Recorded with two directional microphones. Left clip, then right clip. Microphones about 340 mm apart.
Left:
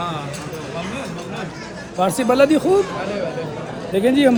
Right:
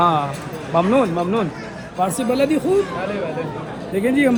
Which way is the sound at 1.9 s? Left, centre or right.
Left.